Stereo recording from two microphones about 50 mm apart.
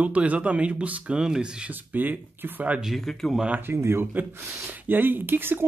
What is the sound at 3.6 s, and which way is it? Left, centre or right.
Speech, right.